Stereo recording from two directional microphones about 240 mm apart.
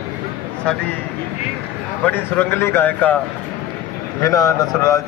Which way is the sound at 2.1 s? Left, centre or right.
Centre.